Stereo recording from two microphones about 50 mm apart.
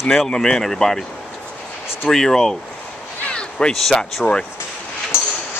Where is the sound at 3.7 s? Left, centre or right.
Centre.